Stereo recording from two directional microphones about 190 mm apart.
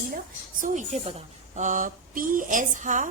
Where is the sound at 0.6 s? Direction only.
40° right (ahead or behind).